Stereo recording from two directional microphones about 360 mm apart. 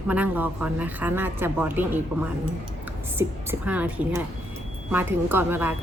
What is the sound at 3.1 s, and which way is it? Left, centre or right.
A woman's voice, centre.